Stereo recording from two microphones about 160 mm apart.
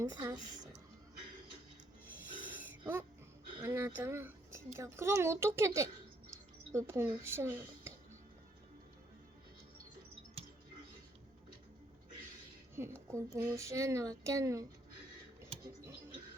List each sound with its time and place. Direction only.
0.0 s speech: 25° right (ahead or behind)
2.5 s a sound: 10° right (ahead or behind)
3.6 s speech: 15° right (ahead or behind)
10.4 s a sound: 40° right (ahead or behind)
12.7 s speech: 15° right (ahead or behind)
15.6 s music: 15° right (ahead or behind)